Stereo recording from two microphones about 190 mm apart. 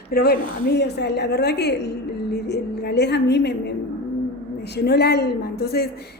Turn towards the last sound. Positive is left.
turn(degrees=55)  # may be behind; listen again after turning